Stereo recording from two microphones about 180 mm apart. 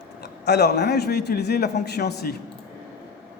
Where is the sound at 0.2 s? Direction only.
65° left (ahead or behind).